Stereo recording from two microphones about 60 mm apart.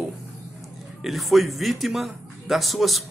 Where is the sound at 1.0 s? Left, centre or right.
Centre.